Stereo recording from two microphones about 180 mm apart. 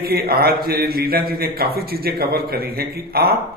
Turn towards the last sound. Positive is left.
turn(degrees=-60)  # may be behind; listen again after turning